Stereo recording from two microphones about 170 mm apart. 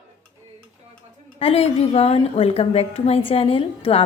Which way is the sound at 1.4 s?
35° left (ahead or behind).